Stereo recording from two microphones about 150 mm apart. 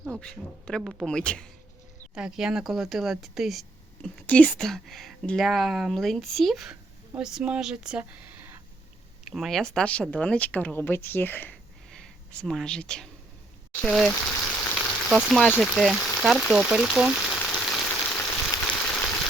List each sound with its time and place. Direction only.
0.2 s speech: 5° left (ahead or behind)
2.1 s speech: 5° right (ahead or behind)
14.2 s speech: 15° left (ahead or behind)
14.4 s frying: 10° left (ahead or behind)
14.8 s frying: centre (ahead or behind)
15.6 s speech: centre (ahead or behind)
17.8 s frying: 10° left (ahead or behind)
18.7 s a sound: 10° left (ahead or behind)